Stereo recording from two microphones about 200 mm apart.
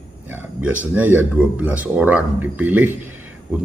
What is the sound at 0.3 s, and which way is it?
Speech, 10° right (ahead or behind).